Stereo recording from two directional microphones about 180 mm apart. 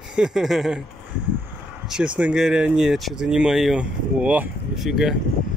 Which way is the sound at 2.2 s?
5° right (ahead or behind).